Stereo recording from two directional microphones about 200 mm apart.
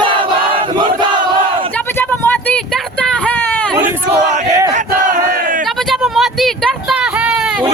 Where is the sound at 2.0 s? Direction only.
10° left (ahead or behind).